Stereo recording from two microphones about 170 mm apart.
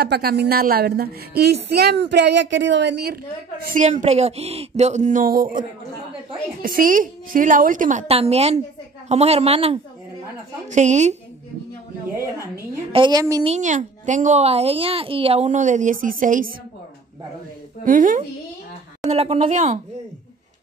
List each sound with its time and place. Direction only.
0.0 s speech: 65° right (ahead or behind)
3.6 s a woman's voice: 50° right (ahead or behind)
8.1 s a woman's voice: 35° right (ahead or behind)
12.9 s a woman's voice: 25° right (ahead or behind)
13.4 s a woman's voice: 40° right (ahead or behind)
17.8 s a woman's voice: 50° right (ahead or behind)
19.0 s a woman's voice: 40° right (ahead or behind)